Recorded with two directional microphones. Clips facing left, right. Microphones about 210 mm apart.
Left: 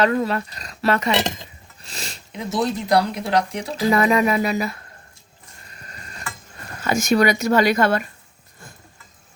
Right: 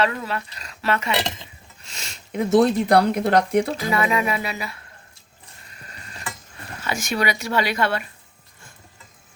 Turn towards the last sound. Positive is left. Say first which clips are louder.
# left 5 dB
turn(degrees=45)  # may be behind; listen again after turning